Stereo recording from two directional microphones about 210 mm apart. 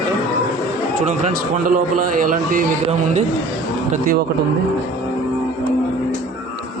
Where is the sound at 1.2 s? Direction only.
40° right (ahead or behind).